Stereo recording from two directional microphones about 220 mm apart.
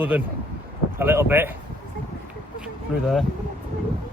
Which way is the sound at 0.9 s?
10° right (ahead or behind).